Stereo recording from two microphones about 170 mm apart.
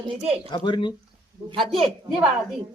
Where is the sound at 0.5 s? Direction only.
30° left (ahead or behind).